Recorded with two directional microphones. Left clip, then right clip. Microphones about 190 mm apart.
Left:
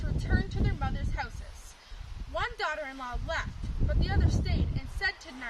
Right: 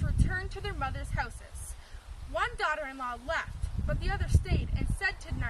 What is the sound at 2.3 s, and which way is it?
Speech, 10° left (ahead or behind).